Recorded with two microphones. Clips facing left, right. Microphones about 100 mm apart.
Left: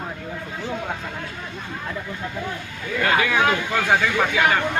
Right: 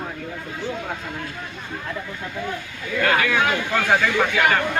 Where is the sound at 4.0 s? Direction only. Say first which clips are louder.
Even; 5° left (ahead or behind).